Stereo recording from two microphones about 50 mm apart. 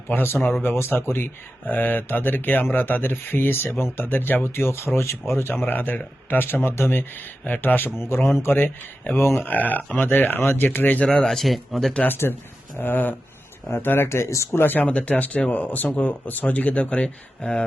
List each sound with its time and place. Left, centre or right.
0.1 s speech: left
4.0 s speech: left
4.5 s speech: left
7.9 s speech: left
11.0 s speech: centre
12.0 s speech: left
14.5 s speech: left
14.8 s speech: left